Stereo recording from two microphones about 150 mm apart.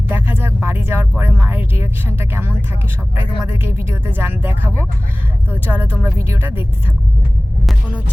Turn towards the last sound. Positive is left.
turn(degrees=-15)  # may be behind; listen again after turning